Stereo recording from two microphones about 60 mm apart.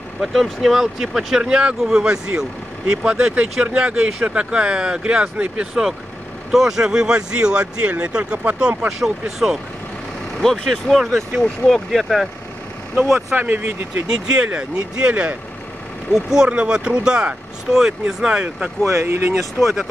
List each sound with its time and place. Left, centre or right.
0.2 s speech: centre
6.5 s speech: centre
10.4 s speech: centre
13.3 s speech: right
14.0 s speech: centre
18.9 s speech: right
19.6 s speech: centre